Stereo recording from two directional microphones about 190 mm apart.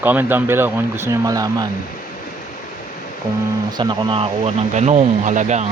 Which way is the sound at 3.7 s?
20° right (ahead or behind).